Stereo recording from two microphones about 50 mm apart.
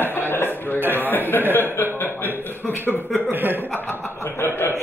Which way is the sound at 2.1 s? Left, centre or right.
Right.